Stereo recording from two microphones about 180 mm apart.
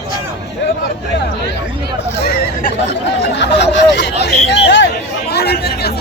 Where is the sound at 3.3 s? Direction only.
75° left (ahead or behind).